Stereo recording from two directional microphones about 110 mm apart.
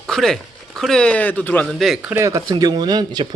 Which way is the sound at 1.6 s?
Centre (ahead or behind).